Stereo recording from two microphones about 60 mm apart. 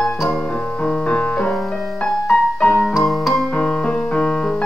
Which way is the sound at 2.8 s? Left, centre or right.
Centre.